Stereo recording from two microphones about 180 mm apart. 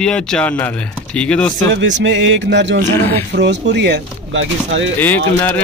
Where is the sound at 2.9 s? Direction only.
10° left (ahead or behind).